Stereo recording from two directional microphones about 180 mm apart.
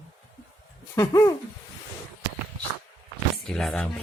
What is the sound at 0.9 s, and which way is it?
Speech, 20° left (ahead or behind).